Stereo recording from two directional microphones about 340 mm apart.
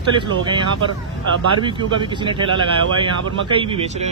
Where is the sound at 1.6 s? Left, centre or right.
Centre.